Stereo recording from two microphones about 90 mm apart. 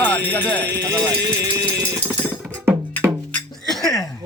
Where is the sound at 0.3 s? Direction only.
15° left (ahead or behind).